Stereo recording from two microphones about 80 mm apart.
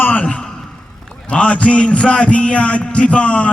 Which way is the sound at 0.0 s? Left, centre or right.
Left.